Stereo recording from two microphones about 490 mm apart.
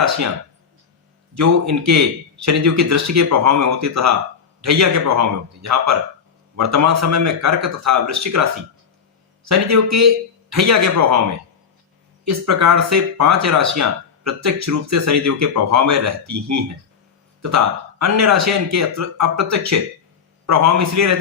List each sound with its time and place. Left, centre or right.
1.4 s speech: right
12.2 s speech: right
18.0 s speech: right